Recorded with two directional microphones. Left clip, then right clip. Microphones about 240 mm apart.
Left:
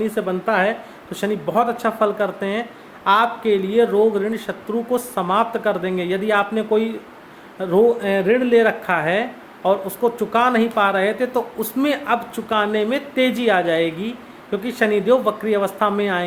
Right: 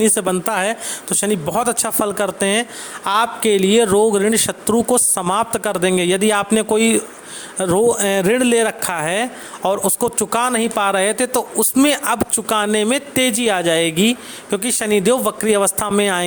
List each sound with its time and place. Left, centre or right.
0.0 s speech: right